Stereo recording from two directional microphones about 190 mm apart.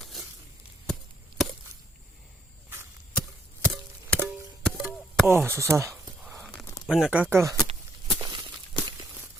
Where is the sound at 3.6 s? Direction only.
5° left (ahead or behind).